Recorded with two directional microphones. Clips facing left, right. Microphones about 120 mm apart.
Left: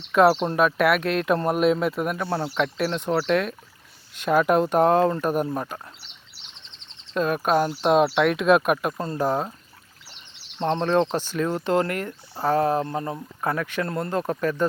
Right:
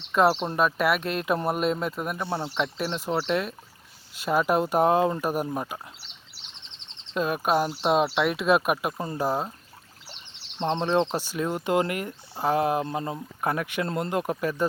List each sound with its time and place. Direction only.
0.1 s speech: centre (ahead or behind)
7.1 s speech: 5° right (ahead or behind)
10.7 s speech: 10° right (ahead or behind)